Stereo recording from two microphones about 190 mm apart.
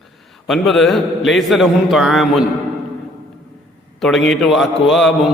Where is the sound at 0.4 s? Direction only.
Centre (ahead or behind).